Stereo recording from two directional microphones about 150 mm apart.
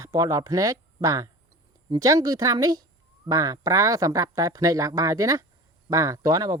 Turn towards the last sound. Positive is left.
turn(degrees=-25)  # may be behind; listen again after turning